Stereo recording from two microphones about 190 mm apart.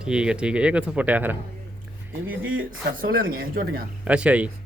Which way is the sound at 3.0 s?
50° right (ahead or behind).